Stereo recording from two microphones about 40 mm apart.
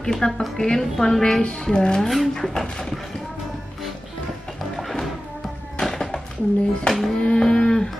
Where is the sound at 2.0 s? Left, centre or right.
Centre.